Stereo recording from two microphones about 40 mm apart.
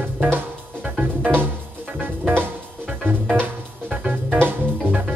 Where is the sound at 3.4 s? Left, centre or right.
Right.